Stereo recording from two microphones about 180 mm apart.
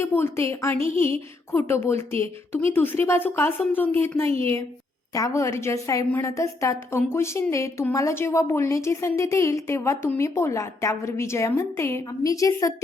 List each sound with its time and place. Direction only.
0.0 s a woman's voice: 15° left (ahead or behind)
4.3 s a woman's voice: 30° right (ahead or behind)
5.1 s a woman's voice: 15° left (ahead or behind)